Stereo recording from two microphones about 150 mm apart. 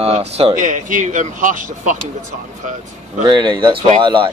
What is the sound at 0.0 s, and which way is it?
Speech, 45° right (ahead or behind).